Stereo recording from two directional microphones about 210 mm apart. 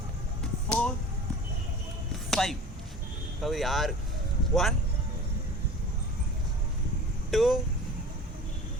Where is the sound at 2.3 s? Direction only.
Centre (ahead or behind).